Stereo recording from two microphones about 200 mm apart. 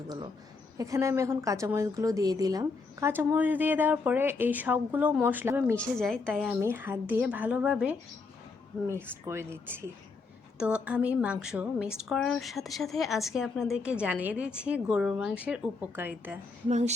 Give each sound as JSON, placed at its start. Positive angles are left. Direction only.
{"t": 0.8, "sound": "speech", "side_deg": -15}
{"t": 5.7, "sound": "a woman's voice", "side_deg": 5}
{"t": 6.5, "sound": "speech", "side_deg": -10}
{"t": 9.2, "sound": "a woman's voice", "side_deg": -15}
{"t": 16.6, "sound": "speech", "side_deg": -35}